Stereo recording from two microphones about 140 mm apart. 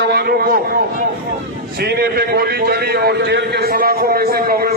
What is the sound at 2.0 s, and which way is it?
A man's voice, 90° right.